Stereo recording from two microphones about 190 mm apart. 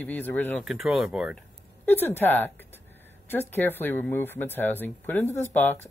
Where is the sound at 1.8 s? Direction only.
10° left (ahead or behind).